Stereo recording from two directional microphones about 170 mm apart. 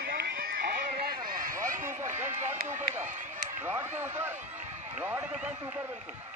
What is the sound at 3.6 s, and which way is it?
Speech, 10° right (ahead or behind).